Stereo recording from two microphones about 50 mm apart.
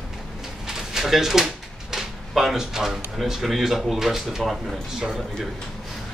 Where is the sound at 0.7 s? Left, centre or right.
Centre.